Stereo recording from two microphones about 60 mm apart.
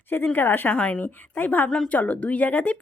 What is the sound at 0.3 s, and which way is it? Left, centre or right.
Speech, left.